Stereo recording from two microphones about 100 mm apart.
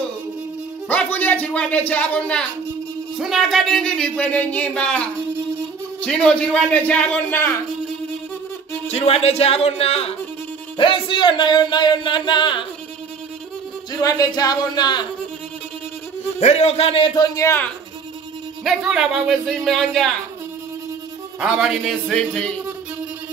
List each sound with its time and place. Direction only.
0.8 s speech: 15° left (ahead or behind)
3.2 s speech: centre (ahead or behind)
6.0 s speech: 10° left (ahead or behind)
8.9 s speech: 85° left
10.8 s speech: 55° left (ahead or behind)
13.9 s speech: 40° left (ahead or behind)
16.3 s speech: 90° left; by 17.1 s 70° left (ahead or behind)
18.6 s speech: 5° right (ahead or behind)
21.4 s speech: 5° right (ahead or behind)